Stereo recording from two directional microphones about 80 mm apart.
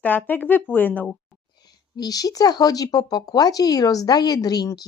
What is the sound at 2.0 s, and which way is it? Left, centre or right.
Speech, left.